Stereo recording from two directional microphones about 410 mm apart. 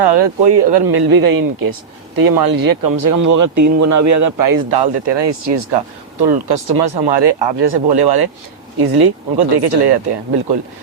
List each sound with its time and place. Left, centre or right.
0.0 s speech: right
6.2 s speech: right